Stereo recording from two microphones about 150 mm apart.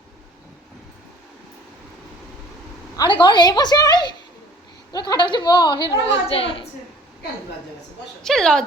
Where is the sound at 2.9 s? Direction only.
30° left (ahead or behind).